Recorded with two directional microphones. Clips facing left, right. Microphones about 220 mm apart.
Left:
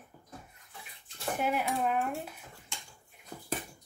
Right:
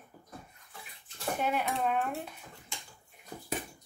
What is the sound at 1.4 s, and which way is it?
Speech, 5° left (ahead or behind).